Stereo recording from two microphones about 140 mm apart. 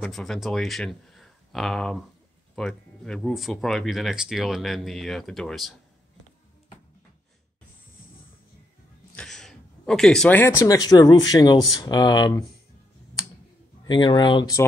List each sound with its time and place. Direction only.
0.0 s speech: centre (ahead or behind)
9.1 s a sound: 5° left (ahead or behind)
10.4 s speech: 20° left (ahead or behind)
13.8 s speech: 35° left (ahead or behind)